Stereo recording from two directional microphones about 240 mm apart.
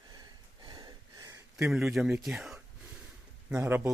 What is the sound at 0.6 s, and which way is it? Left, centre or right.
Gasp, centre.